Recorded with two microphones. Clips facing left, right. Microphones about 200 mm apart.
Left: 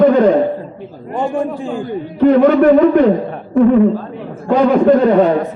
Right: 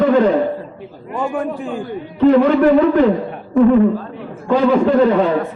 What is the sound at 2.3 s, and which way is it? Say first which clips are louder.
Speech: left 4 dB; 45° left (ahead or behind).